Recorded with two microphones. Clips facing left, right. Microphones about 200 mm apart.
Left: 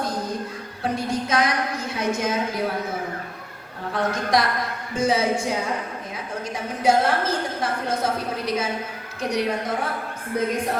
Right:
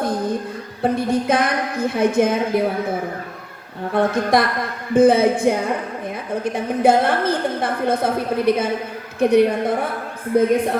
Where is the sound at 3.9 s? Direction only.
55° right (ahead or behind).